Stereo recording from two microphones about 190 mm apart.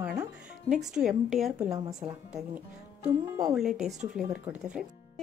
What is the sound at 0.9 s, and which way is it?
Speech, centre (ahead or behind).